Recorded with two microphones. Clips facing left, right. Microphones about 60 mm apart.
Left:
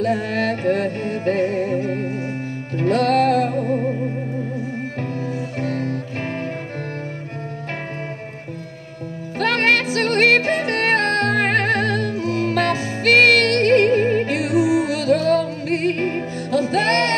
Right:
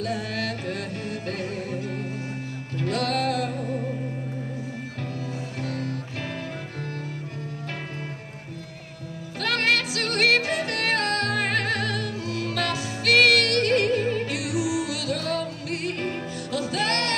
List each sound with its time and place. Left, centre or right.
0.0 s music: left
5.6 s music: left
9.4 s music: left